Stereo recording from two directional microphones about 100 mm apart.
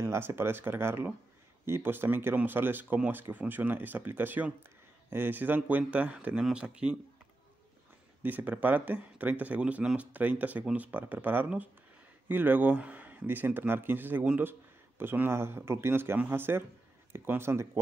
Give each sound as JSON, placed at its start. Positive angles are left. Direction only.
{"t": 0.0, "sound": "speech", "side_deg": -25}
{"t": 8.2, "sound": "speech", "side_deg": -20}